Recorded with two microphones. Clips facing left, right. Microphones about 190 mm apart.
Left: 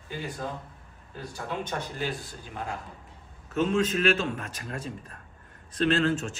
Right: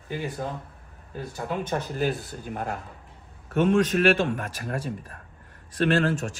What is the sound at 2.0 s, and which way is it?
A man's voice, 55° right (ahead or behind).